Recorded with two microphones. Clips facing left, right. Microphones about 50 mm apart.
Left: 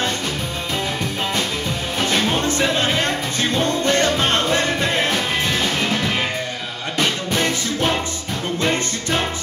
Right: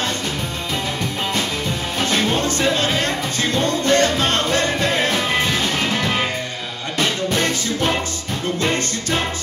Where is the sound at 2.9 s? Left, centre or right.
Centre.